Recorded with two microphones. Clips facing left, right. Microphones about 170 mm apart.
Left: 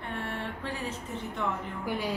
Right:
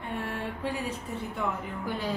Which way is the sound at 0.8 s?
10° right (ahead or behind).